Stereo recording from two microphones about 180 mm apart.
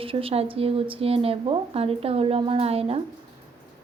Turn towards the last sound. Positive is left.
turn(degrees=-35)  # may be behind; listen again after turning